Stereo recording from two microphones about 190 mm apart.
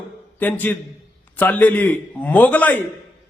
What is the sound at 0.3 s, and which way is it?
A man's voice, 10° left (ahead or behind).